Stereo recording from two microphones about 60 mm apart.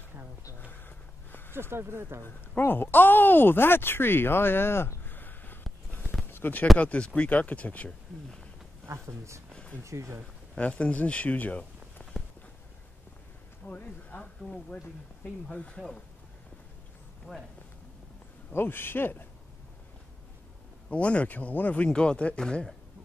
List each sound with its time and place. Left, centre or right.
0.7 s a sound: left
1.5 s speech: right
2.2 s speech: left
5.9 s a sound: left
6.8 s speech: left
8.8 s speech: right
10.6 s speech: left
12.0 s walk: left
13.7 s speech: left
17.3 s speech: centre
18.5 s speech: left
20.9 s speech: left